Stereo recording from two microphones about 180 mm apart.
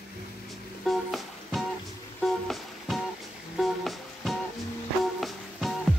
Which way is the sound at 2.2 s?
Centre (ahead or behind).